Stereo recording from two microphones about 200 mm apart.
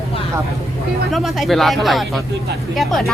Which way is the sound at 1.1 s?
Centre (ahead or behind).